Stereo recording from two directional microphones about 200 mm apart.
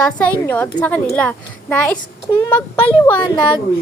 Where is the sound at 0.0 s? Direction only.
5° left (ahead or behind).